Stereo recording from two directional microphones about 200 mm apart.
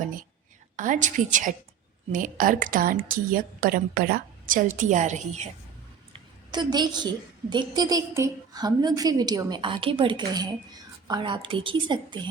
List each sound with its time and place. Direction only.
0.8 s a woman's voice: 40° right (ahead or behind)
6.1 s a sound: 20° right (ahead or behind)
7.5 s a woman's voice: 20° right (ahead or behind)